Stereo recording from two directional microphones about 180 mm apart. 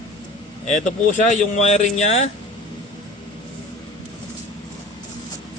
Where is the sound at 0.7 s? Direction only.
45° left (ahead or behind).